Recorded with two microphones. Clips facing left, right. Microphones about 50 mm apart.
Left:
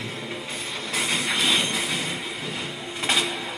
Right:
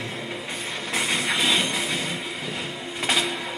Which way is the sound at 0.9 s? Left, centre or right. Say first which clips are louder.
Right 1 dB; centre.